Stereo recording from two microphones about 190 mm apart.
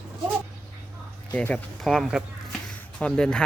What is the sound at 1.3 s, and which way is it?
Speech, 5° left (ahead or behind).